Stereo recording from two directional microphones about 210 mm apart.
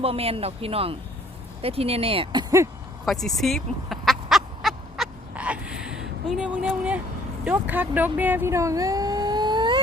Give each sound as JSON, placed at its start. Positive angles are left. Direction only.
{"t": 0.0, "sound": "speech", "side_deg": -30}
{"t": 3.1, "sound": "duck", "side_deg": 0}
{"t": 7.4, "sound": "a sound", "side_deg": -10}